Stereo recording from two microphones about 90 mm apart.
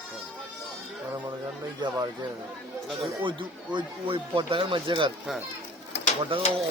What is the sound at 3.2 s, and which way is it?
Speech, 65° right (ahead or behind).